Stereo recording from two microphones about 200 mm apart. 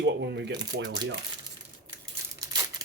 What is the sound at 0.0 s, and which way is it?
Speech, 60° right (ahead or behind).